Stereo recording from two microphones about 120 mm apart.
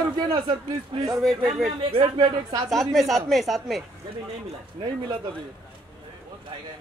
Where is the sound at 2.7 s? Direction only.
Centre (ahead or behind).